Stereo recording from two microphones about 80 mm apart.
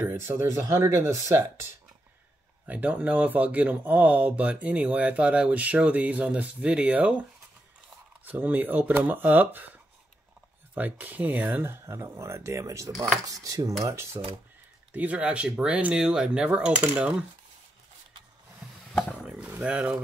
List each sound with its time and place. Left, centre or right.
0.0 s speech: right
2.6 s speech: centre
8.3 s speech: right
10.7 s speech: right
11.6 s speech: right
14.9 s speech: centre
19.6 s speech: centre